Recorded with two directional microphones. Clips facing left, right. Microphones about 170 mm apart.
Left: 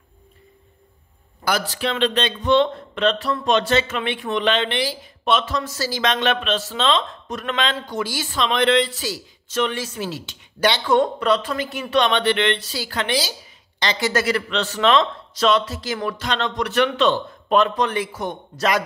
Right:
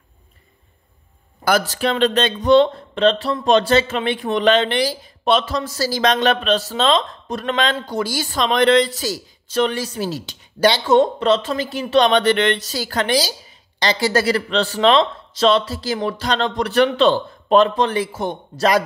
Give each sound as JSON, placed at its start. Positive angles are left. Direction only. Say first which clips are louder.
{"t": 1.4, "sound": "speech", "louder": "right 5 dB", "side_deg": -45}
{"t": 10.9, "sound": "speech", "louder": "right 2 dB", "side_deg": -25}